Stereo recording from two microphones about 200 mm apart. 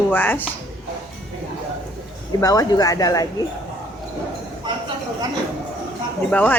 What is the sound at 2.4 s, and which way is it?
Speech, 20° left (ahead or behind).